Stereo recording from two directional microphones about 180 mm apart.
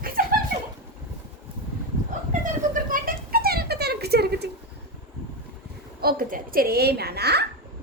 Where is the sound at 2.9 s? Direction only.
55° right (ahead or behind).